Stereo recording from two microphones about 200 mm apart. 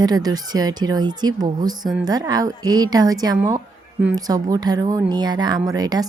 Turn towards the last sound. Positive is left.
turn(degrees=-20)  # may be behind; listen again after turning